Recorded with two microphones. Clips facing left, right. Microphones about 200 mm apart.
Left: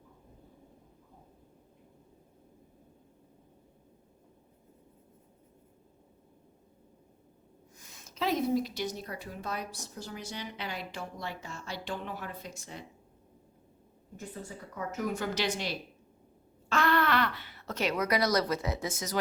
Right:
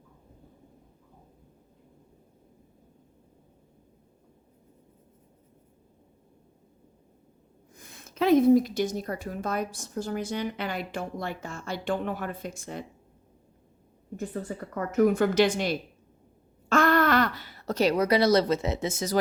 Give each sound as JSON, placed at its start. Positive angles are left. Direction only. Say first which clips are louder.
{"t": 7.8, "sound": "a woman's voice", "louder": "right 7 dB", "side_deg": -55}
{"t": 14.4, "sound": "speech", "louder": "right 6 dB", "side_deg": -60}